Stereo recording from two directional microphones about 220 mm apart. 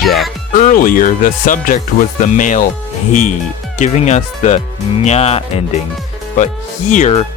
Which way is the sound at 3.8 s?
30° left (ahead or behind).